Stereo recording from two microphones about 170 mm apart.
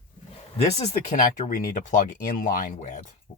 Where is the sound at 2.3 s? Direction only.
55° left (ahead or behind).